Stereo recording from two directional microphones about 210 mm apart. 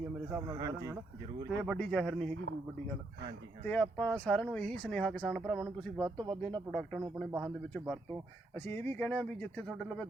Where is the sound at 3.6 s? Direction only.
5° left (ahead or behind).